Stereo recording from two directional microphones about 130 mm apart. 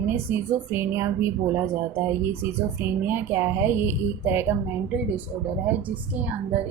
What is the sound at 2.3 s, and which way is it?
A woman's voice, 15° right (ahead or behind).